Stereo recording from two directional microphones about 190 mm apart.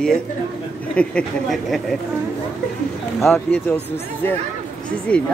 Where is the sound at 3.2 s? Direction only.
5° left (ahead or behind).